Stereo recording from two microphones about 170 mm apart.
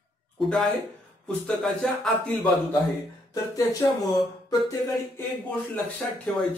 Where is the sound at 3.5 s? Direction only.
20° left (ahead or behind).